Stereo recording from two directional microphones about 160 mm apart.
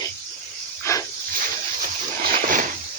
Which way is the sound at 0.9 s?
15° left (ahead or behind).